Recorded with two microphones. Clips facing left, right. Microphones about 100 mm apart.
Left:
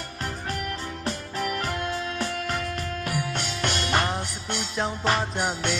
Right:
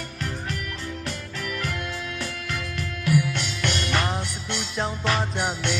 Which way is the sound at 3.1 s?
35° left (ahead or behind).